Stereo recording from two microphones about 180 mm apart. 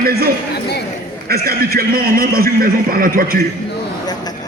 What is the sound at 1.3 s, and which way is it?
Speech, 55° right (ahead or behind).